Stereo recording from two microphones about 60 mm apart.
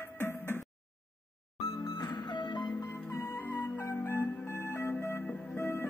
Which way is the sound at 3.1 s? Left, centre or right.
Left.